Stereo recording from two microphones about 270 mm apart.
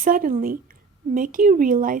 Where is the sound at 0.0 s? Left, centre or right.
Right.